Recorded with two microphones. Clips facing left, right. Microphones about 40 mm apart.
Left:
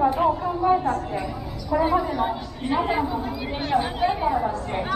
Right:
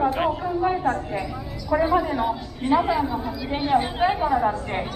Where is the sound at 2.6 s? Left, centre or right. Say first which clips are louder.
Right 4 dB; centre.